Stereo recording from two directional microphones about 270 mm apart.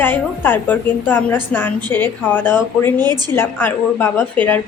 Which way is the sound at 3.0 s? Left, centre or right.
Centre.